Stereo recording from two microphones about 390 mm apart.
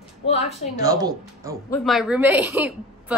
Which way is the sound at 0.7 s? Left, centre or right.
Centre.